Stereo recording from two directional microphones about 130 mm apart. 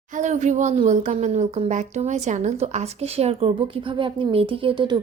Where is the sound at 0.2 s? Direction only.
65° right (ahead or behind).